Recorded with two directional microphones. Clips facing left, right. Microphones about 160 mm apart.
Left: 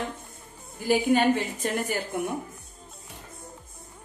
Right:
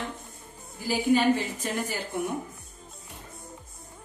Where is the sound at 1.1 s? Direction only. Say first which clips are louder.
Right 1 dB; 60° left (ahead or behind).